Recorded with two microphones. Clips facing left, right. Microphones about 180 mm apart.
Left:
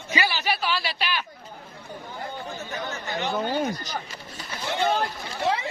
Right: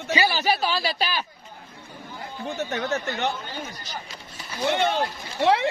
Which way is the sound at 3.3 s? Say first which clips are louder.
Left 10 dB; 65° left (ahead or behind).